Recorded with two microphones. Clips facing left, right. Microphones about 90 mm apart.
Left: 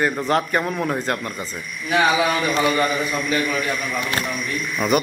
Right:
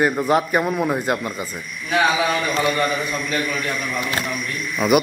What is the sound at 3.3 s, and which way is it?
Speech, 5° left (ahead or behind).